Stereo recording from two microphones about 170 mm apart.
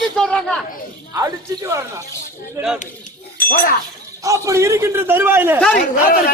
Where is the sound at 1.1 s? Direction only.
20° right (ahead or behind).